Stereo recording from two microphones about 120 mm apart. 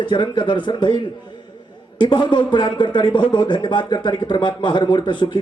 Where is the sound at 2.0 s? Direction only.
40° left (ahead or behind).